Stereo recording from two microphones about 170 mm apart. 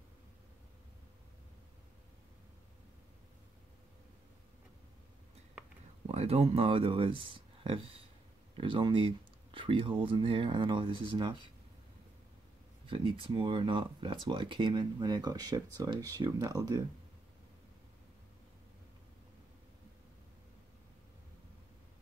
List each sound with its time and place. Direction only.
6.0 s speech: 35° right (ahead or behind)
12.8 s speech: 30° right (ahead or behind)